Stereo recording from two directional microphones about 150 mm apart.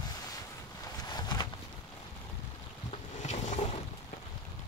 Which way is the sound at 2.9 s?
50° left (ahead or behind).